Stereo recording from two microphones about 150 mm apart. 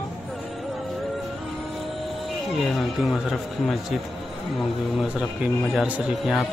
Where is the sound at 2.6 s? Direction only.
Centre (ahead or behind).